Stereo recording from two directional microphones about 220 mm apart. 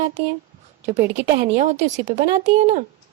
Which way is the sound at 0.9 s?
30° right (ahead or behind).